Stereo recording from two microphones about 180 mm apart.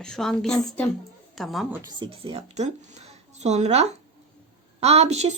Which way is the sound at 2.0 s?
30° right (ahead or behind).